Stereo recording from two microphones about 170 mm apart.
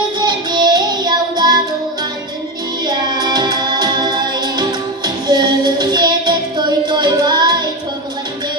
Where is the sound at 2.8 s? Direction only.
25° right (ahead or behind).